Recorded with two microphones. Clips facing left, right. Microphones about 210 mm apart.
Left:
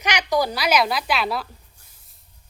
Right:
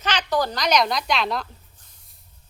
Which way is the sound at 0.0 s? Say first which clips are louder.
Left 2 dB; 15° left (ahead or behind).